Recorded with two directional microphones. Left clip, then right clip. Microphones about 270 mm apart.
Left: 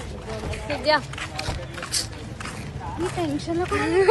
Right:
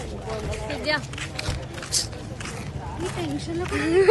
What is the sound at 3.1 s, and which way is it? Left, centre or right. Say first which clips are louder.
Speech: left 5 dB; centre.